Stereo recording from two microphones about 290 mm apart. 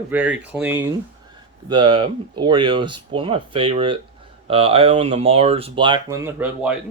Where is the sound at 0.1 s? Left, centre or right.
Centre.